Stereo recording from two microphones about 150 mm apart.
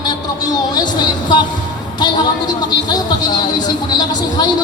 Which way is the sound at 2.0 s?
30° left (ahead or behind).